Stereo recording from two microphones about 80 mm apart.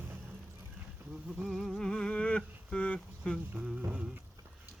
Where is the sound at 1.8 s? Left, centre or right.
Centre.